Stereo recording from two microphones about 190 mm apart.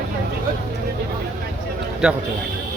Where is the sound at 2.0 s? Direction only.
5° right (ahead or behind).